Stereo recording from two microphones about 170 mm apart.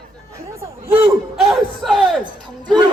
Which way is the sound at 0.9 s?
5° right (ahead or behind).